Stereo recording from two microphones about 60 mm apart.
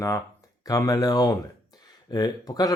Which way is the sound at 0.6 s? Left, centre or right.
Left.